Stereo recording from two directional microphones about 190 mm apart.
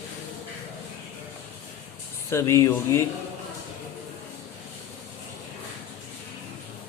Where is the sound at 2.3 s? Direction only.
15° left (ahead or behind).